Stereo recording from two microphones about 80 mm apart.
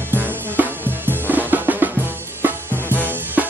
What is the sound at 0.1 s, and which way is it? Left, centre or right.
Drum, right.